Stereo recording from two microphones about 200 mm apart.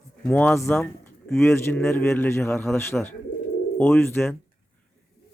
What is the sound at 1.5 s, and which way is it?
A man's voice, 15° left (ahead or behind).